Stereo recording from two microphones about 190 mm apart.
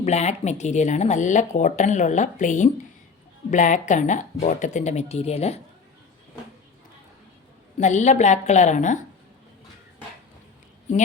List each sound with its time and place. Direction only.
0.0 s speech: 35° left (ahead or behind)
7.8 s speech: 40° left (ahead or behind)